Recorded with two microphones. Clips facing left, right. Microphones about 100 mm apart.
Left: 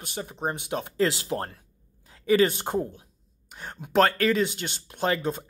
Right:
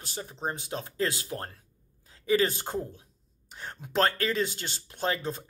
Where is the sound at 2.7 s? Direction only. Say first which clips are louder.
Left 5 dB; 30° left (ahead or behind).